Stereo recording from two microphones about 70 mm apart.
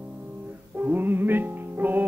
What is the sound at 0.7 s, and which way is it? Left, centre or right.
Music, right.